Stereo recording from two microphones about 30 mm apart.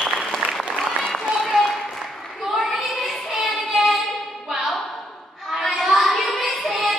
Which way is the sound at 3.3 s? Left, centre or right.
Centre.